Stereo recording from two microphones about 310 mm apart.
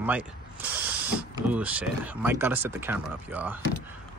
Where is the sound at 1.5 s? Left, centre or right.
Centre.